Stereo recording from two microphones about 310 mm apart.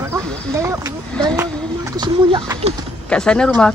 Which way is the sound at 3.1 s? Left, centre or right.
Centre.